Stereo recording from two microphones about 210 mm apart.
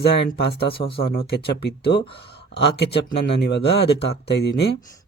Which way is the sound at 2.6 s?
55° left (ahead or behind).